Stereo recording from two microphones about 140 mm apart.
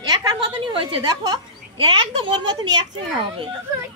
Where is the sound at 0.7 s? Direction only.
35° right (ahead or behind).